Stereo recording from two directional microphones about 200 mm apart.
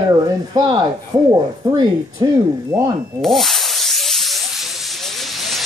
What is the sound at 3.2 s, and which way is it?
Rub, centre (ahead or behind).